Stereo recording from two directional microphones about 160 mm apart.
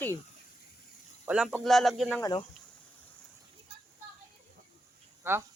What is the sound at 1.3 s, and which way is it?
Speech, 5° right (ahead or behind).